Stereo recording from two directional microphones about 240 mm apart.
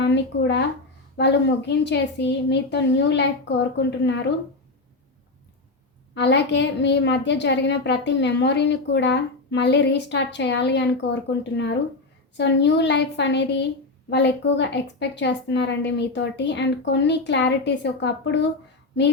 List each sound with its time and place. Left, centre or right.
0.0 s a woman's voice: left
6.1 s a woman's voice: left